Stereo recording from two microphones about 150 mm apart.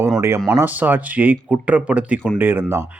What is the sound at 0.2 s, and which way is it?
Speech, 20° right (ahead or behind).